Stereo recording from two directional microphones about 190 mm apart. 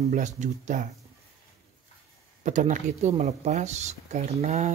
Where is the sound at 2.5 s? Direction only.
40° right (ahead or behind).